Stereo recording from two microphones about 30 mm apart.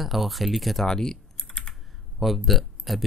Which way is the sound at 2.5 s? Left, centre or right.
Centre.